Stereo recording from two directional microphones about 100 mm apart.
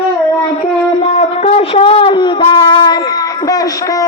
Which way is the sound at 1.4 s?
80° left.